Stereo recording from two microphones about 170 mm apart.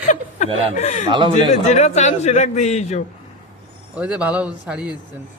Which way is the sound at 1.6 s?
40° left (ahead or behind).